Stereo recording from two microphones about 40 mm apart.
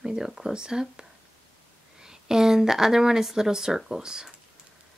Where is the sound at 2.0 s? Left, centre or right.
Centre.